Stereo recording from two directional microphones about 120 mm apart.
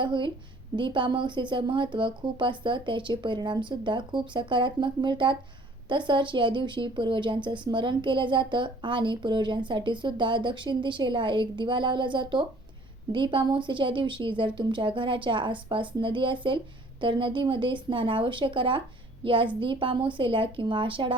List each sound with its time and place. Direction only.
0.0 s a woman's voice: 40° right (ahead or behind)